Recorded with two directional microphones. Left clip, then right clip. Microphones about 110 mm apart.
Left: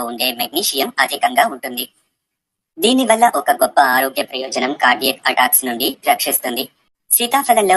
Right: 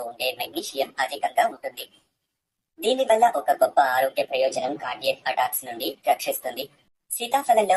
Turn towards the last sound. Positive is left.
turn(degrees=35)  # may be behind; listen again after turning